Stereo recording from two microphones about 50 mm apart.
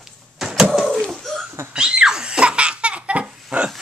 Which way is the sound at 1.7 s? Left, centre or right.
Centre.